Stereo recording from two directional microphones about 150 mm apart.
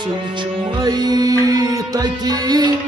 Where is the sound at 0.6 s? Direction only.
25° right (ahead or behind).